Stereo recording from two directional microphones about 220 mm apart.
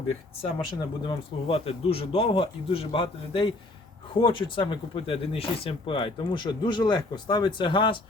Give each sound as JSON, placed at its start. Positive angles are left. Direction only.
{"t": 0.8, "sound": "speech", "side_deg": 25}